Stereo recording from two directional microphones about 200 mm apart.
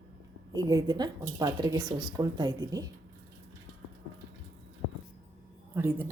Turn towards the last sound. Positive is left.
turn(degrees=-10)  # may be behind; listen again after turning